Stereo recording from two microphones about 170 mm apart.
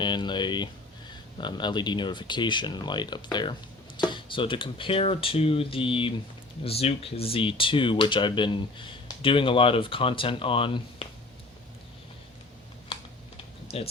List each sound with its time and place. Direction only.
0.0 s speech: 25° left (ahead or behind)
12.9 s typing: 35° left (ahead or behind)